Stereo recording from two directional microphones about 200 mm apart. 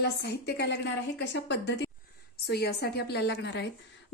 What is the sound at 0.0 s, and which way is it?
A woman's voice, 60° left (ahead or behind).